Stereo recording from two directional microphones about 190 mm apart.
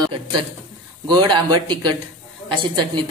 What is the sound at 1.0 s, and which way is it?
Speech, 20° right (ahead or behind).